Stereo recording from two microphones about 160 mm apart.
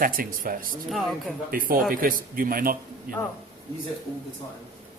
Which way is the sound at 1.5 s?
60° right (ahead or behind).